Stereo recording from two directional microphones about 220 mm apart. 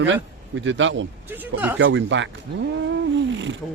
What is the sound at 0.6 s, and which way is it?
Speech, 60° right (ahead or behind).